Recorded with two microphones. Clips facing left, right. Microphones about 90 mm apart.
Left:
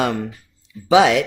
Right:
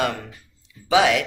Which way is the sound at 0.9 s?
25° left (ahead or behind).